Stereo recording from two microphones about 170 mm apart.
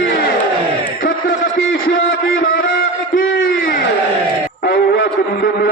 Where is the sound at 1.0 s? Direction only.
60° left (ahead or behind).